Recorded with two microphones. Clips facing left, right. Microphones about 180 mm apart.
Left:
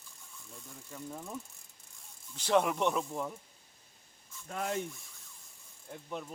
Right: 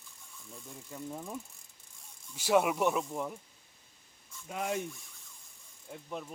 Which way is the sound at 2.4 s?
10° right (ahead or behind).